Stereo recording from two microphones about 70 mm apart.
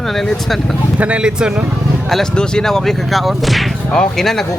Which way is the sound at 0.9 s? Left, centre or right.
Centre.